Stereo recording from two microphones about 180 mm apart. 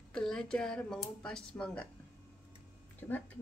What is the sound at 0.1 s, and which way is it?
Speech, 5° left (ahead or behind).